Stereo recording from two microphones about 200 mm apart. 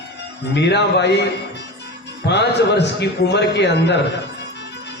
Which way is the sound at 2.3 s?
60° left (ahead or behind).